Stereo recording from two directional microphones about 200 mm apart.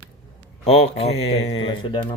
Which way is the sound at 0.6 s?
30° left (ahead or behind).